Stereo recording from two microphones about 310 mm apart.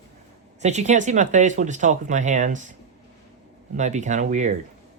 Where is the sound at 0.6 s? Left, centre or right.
Right.